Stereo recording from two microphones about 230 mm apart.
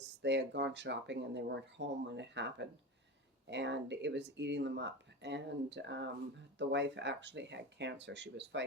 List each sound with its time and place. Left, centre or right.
0.0 s speech: right